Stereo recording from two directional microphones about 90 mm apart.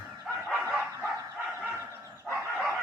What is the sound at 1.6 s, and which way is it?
Dog, 25° right (ahead or behind).